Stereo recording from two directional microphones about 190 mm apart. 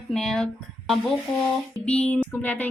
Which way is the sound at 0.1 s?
5° left (ahead or behind).